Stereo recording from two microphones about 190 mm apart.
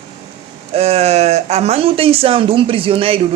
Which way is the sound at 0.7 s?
35° right (ahead or behind).